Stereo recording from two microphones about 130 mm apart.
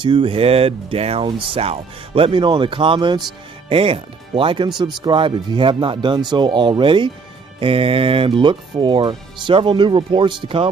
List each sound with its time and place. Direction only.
0.0 s speech: 40° right (ahead or behind)